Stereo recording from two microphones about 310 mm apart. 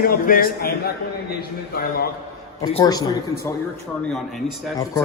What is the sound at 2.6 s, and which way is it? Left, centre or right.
Speech, centre.